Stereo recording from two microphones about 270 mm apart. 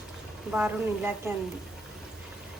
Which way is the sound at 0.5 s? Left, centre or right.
Centre.